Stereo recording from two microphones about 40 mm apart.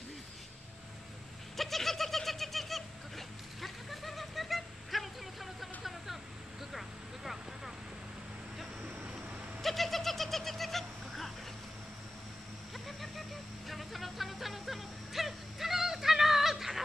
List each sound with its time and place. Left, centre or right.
1.6 s bird: centre
8.8 s vehicle: right
9.6 s bird: centre
12.7 s vehicle: centre
13.7 s music: centre